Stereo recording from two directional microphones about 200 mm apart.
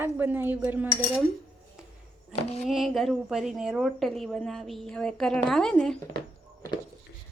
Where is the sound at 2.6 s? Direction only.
Centre (ahead or behind).